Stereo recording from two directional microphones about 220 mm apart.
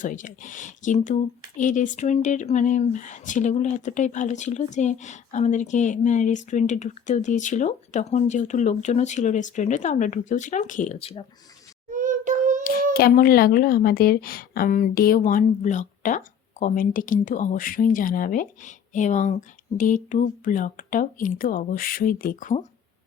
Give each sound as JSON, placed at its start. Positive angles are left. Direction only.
{"t": 0.0, "sound": "speech", "side_deg": 35}
{"t": 11.9, "sound": "child singing", "side_deg": -35}
{"t": 12.6, "sound": "speech", "side_deg": 45}